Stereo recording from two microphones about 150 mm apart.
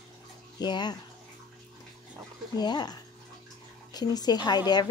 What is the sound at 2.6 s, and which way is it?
Speech, 30° left (ahead or behind).